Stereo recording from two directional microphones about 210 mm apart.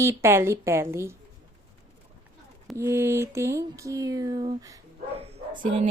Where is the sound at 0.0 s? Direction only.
15° right (ahead or behind).